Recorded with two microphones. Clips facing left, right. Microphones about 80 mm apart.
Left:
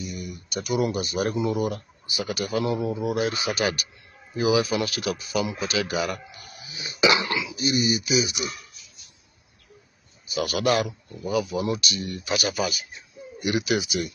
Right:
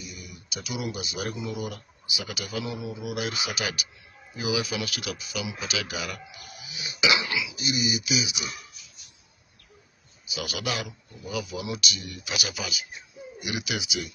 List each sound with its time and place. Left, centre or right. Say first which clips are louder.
0.1 s speech: left 8 dB; left
1.7 s speech: left 5 dB; left
2.8 s speech: left 7 dB; left
7.0 s speech: left 4 dB; left
10.2 s speech: left 8 dB; left
12.4 s speech: left 8 dB; left